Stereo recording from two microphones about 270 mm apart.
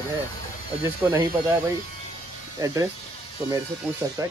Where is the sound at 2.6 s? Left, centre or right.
Centre.